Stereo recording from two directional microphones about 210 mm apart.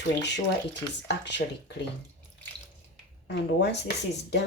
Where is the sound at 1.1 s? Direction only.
55° left (ahead or behind).